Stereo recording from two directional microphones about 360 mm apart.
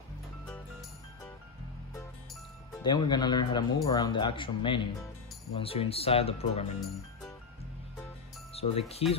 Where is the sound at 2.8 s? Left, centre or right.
Centre.